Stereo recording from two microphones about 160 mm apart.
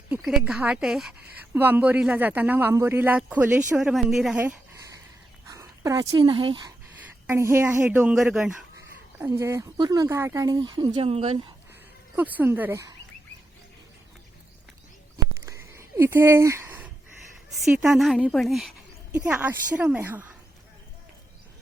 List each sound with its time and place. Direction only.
0.1 s a woman's voice: 5° right (ahead or behind)
4.4 s a sound: 10° right (ahead or behind)
5.5 s speech: 20° right (ahead or behind)
7.3 s speech: 15° right (ahead or behind)
9.1 s speech: 15° right (ahead or behind); by 11.3 s 40° right (ahead or behind)
12.1 s speech: 10° right (ahead or behind)
15.4 s a sound: 15° right (ahead or behind)
17.7 s a woman's voice: 5° right (ahead or behind)
19.1 s speech: 10° right (ahead or behind)